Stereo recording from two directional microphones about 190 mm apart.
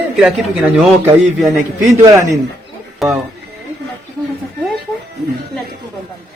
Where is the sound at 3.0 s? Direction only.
Centre (ahead or behind).